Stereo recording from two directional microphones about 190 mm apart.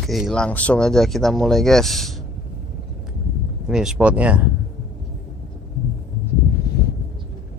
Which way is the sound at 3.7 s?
5° right (ahead or behind).